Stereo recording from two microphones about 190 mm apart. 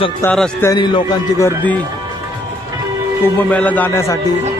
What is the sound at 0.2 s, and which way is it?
Speech, 10° left (ahead or behind).